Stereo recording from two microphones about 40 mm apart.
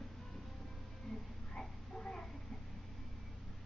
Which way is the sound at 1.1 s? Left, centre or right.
Centre.